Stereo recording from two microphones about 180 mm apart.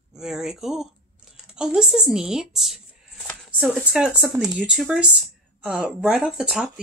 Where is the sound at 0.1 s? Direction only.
5° right (ahead or behind).